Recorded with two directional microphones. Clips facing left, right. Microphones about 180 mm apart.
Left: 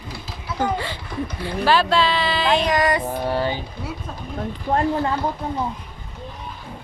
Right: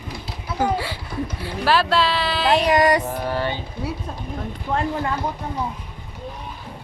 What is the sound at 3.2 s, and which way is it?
Speech, 15° left (ahead or behind).